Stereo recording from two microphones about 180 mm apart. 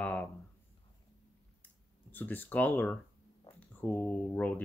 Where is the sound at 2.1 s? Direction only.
10° left (ahead or behind).